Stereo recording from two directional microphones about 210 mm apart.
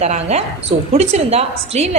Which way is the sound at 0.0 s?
30° right (ahead or behind).